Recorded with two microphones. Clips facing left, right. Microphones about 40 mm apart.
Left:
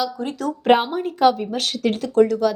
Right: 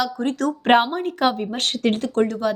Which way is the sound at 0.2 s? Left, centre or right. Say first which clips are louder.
Right 3 dB; right.